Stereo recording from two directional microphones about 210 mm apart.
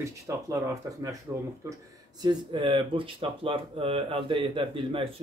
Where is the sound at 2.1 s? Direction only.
20° right (ahead or behind).